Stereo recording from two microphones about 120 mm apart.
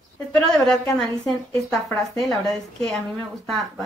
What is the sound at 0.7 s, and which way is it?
A woman's voice, 5° left (ahead or behind).